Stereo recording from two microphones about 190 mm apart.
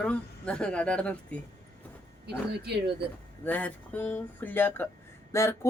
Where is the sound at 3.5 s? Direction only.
10° left (ahead or behind).